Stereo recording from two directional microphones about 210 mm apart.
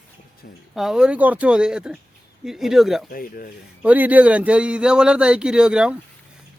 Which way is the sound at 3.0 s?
40° left (ahead or behind).